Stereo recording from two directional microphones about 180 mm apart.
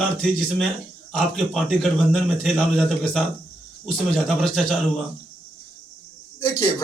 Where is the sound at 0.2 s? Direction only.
5° left (ahead or behind).